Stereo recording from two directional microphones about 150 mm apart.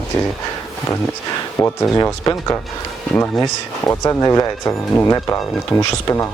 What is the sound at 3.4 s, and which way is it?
Speech, 25° left (ahead or behind).